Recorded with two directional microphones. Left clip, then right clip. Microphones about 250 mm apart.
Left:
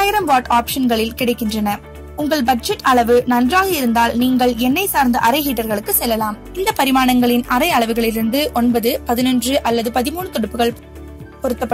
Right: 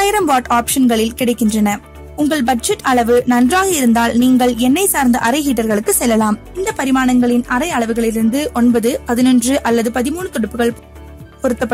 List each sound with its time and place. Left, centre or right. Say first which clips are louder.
0.0 s a woman's voice: right 1 dB; right